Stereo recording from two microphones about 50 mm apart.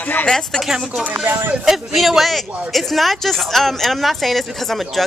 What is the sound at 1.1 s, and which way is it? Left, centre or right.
Speech, right.